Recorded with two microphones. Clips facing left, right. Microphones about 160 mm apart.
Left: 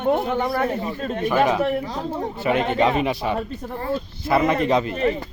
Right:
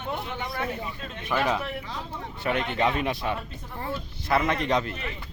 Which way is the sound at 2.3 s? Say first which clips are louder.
Left 6 dB; 5° left (ahead or behind).